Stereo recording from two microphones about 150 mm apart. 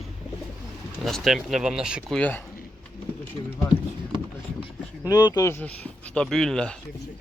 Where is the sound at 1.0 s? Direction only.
Centre (ahead or behind).